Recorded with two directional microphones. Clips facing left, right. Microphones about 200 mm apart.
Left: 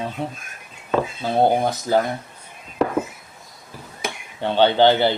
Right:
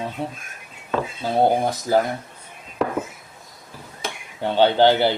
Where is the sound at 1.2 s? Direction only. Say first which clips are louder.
Even; 5° right (ahead or behind).